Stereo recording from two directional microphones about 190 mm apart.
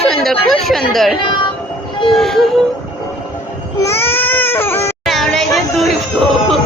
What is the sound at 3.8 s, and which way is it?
Baby cry, 15° left (ahead or behind).